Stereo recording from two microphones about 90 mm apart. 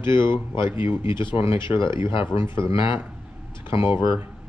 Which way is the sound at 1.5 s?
65° left (ahead or behind).